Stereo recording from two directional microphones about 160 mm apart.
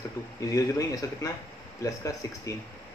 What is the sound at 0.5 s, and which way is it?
Speech, 20° left (ahead or behind).